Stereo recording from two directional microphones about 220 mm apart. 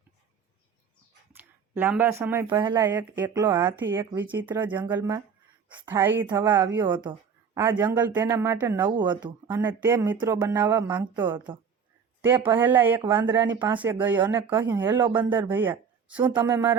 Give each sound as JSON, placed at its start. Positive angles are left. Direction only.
{"t": 1.3, "sound": "speech", "side_deg": -10}
{"t": 9.2, "sound": "a woman's voice", "side_deg": -10}